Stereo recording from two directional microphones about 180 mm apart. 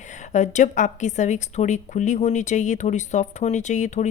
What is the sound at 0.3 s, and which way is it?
A woman's voice, 40° left (ahead or behind).